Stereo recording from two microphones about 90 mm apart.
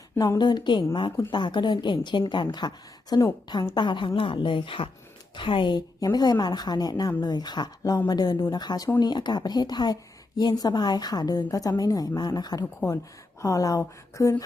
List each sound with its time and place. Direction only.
0.3 s a woman's voice: 55° left (ahead or behind); by 14.4 s 35° left (ahead or behind)